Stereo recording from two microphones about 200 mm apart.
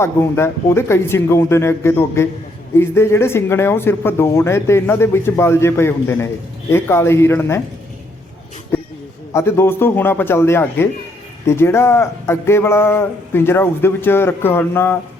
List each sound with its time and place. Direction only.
0.0 s speech: 10° left (ahead or behind)
8.7 s a sound: 10° left (ahead or behind)
9.3 s speech: 10° left (ahead or behind)